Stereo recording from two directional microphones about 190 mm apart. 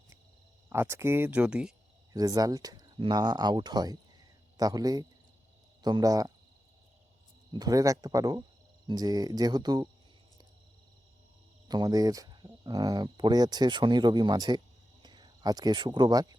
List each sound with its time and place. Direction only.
0.7 s speech: 15° right (ahead or behind)
2.1 s speech: 20° right (ahead or behind)
7.5 s speech: 20° right (ahead or behind)
11.7 s speech: 20° right (ahead or behind)